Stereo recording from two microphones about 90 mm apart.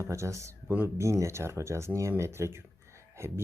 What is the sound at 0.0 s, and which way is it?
Speech, 35° right (ahead or behind).